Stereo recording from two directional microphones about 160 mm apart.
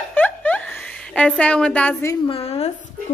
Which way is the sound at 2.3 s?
40° left (ahead or behind).